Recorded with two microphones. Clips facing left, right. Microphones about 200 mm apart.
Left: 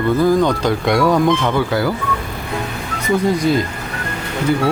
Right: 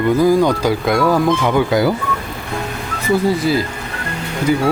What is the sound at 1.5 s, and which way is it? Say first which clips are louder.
Speech: right 3 dB; 15° right (ahead or behind).